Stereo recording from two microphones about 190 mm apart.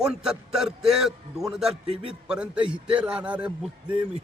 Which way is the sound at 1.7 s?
30° right (ahead or behind).